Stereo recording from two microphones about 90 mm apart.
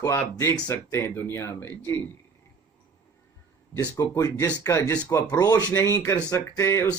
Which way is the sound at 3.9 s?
35° left (ahead or behind).